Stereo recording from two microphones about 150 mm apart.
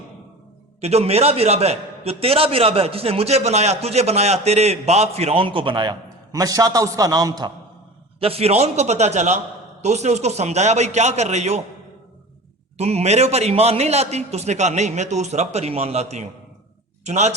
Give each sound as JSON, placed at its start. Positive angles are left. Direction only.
{"t": 0.8, "sound": "a man's voice", "side_deg": -45}
{"t": 8.2, "sound": "a man's voice", "side_deg": -40}
{"t": 12.7, "sound": "a man's voice", "side_deg": -45}